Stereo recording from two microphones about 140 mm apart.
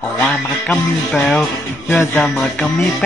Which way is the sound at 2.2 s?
5° left (ahead or behind).